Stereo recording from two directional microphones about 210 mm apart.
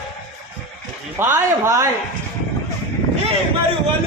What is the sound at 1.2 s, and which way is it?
Speech, 10° right (ahead or behind).